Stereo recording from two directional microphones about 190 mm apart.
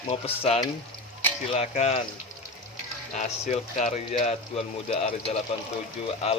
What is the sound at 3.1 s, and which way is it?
Speech, 40° left (ahead or behind).